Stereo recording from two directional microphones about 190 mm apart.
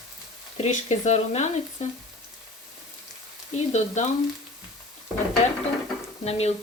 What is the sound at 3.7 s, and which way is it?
Frying, 35° left (ahead or behind).